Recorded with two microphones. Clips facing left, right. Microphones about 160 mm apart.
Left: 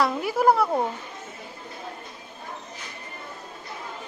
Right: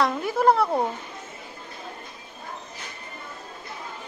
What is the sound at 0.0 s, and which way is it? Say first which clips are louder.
Speech: even; 10° left (ahead or behind).